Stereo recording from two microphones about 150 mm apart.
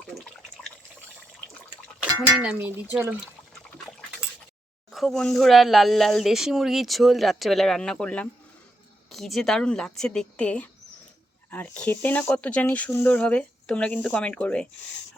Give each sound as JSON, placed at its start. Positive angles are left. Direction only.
{"t": 0.1, "sound": "drip", "side_deg": 5}
{"t": 2.0, "sound": "speech", "side_deg": -5}
{"t": 4.9, "sound": "speech", "side_deg": 0}